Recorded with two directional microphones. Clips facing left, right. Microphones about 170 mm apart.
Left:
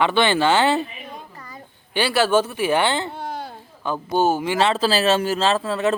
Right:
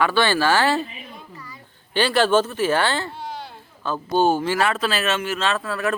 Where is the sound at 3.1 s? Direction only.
50° left (ahead or behind).